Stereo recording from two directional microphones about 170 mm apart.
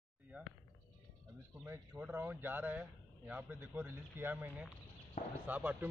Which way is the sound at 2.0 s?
10° right (ahead or behind).